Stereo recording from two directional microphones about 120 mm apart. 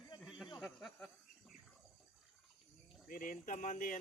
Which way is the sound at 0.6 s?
Centre (ahead or behind).